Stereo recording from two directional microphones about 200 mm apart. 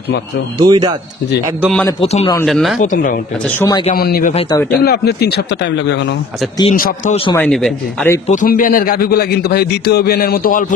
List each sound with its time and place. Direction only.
0.6 s speech: 20° right (ahead or behind)
2.0 s a man's voice: 30° left (ahead or behind)
2.4 s a man's voice: centre (ahead or behind)
2.8 s a man's voice: 40° left (ahead or behind)
4.5 s speech: 15° left (ahead or behind)
4.8 s speech: 55° left (ahead or behind)
6.7 s a man's voice: 40° left (ahead or behind)
7.3 s a man's voice: 5° left (ahead or behind)
8.3 s a man's voice: 40° left (ahead or behind)